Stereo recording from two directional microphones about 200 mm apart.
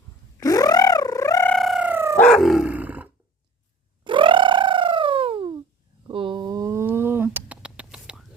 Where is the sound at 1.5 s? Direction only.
Centre (ahead or behind).